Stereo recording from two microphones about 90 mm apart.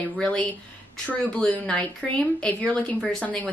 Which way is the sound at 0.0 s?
15° left (ahead or behind).